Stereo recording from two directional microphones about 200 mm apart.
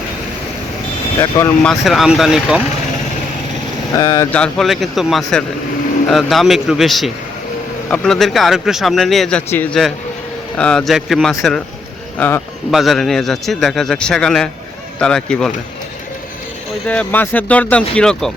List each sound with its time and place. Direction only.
1.2 s speech: 15° left (ahead or behind)
1.8 s speech: centre (ahead or behind)
3.9 s speech: 15° left (ahead or behind)
4.3 s speech: 5° left (ahead or behind)
16.8 s speech: 5° left (ahead or behind)